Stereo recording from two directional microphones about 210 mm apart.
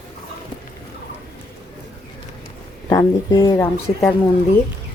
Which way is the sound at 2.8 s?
20° left (ahead or behind).